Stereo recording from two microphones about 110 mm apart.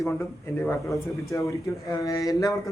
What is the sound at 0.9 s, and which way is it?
Speech, 30° left (ahead or behind).